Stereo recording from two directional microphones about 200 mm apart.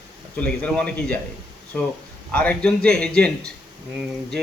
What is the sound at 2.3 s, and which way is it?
A man's voice, 10° left (ahead or behind).